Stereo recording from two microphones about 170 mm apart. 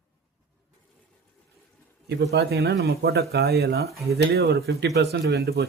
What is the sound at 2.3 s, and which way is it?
Speech, 70° right (ahead or behind).